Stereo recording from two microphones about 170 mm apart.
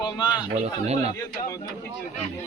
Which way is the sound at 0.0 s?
25° left (ahead or behind).